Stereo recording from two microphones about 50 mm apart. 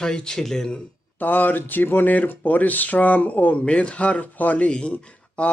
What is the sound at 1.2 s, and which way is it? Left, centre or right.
Speech, left.